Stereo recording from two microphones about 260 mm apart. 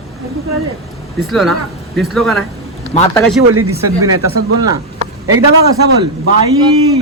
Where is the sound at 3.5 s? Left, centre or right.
Right.